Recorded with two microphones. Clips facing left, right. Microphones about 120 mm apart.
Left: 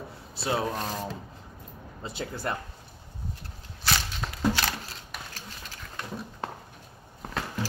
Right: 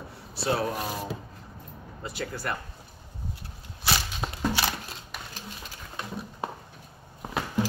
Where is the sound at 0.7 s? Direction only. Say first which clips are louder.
Even; 10° right (ahead or behind).